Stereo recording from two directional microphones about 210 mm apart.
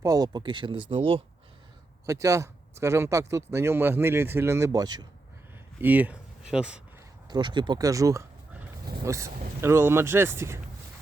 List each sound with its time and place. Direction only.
0.0 s speech: 20° right (ahead or behind)
2.0 s speech: 15° right (ahead or behind)
5.8 s speech: 10° right (ahead or behind)
7.3 s speech: 20° right (ahead or behind)